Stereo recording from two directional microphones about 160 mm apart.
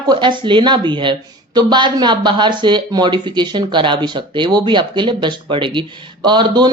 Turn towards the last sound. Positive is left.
turn(degrees=-25)  # may be behind; listen again after turning